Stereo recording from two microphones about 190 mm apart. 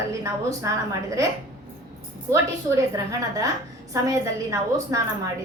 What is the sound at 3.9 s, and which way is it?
A woman's voice, 15° right (ahead or behind).